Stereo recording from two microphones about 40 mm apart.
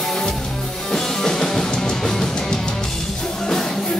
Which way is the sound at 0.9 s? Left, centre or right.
Centre.